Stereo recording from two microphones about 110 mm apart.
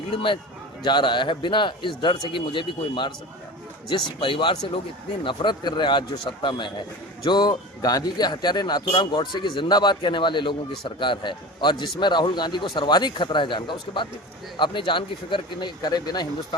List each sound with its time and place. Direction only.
0.9 s speech: 45° left (ahead or behind)
4.2 s speech: 50° left (ahead or behind)